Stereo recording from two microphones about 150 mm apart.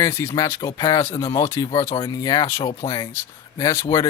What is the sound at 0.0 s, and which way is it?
Speech, 15° left (ahead or behind).